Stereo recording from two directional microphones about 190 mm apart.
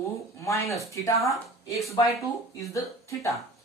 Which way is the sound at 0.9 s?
15° left (ahead or behind).